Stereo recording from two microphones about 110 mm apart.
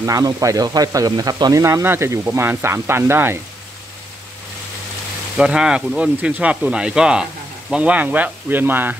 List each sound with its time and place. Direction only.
0.0 s speech: 30° right (ahead or behind)
5.4 s speech: 5° right (ahead or behind)